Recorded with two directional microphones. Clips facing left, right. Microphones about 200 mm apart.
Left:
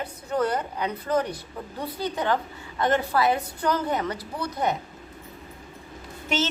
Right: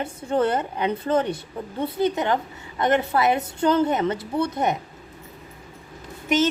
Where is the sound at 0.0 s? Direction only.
25° right (ahead or behind).